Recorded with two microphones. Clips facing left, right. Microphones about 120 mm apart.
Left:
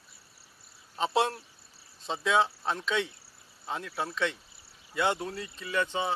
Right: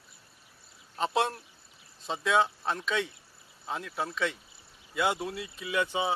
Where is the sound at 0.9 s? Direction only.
Centre (ahead or behind).